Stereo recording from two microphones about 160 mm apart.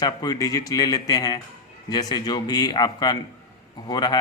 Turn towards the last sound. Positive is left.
turn(degrees=25)  # may be behind; listen again after turning